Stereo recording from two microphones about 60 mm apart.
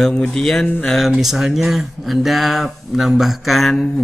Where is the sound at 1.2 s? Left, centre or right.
Centre.